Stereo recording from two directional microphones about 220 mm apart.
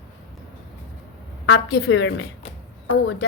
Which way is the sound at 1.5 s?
55° left (ahead or behind).